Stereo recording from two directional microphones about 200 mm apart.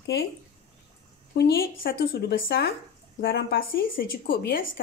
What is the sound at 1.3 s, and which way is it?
A woman's voice, 50° left (ahead or behind).